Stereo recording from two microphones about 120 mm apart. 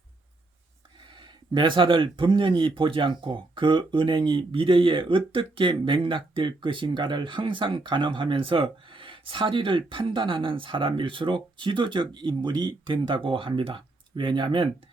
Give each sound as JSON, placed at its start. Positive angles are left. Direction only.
{"t": 1.5, "sound": "speech", "side_deg": -45}